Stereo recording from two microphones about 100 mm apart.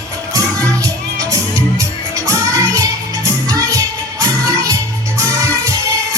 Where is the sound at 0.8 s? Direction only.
35° right (ahead or behind).